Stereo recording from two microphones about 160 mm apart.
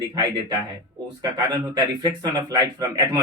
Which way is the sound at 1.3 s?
25° right (ahead or behind).